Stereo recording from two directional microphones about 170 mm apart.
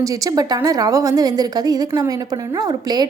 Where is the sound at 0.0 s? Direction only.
20° right (ahead or behind).